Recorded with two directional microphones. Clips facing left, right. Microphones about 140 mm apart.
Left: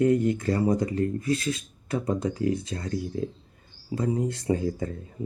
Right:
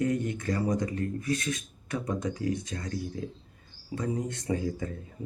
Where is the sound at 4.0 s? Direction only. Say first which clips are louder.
Left 5 dB; 35° left (ahead or behind).